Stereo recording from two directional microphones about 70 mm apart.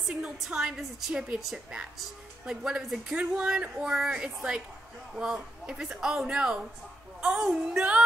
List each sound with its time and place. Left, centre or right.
0.1 s speech: centre